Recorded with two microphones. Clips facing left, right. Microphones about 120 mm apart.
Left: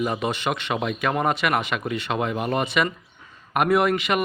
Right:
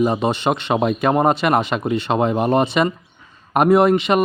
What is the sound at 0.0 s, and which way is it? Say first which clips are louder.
A man's voice: right 7 dB; 25° right (ahead or behind).